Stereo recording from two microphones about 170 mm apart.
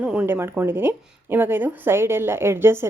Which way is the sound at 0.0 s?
5° right (ahead or behind).